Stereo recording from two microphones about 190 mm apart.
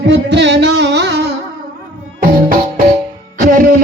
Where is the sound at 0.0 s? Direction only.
65° right (ahead or behind).